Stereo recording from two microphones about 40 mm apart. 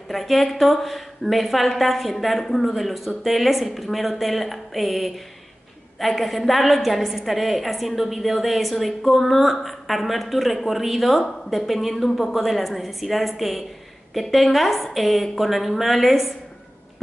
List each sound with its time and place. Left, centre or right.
0.1 s a woman's voice: centre